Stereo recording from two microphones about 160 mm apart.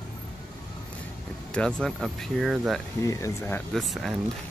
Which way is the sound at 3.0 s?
20° left (ahead or behind).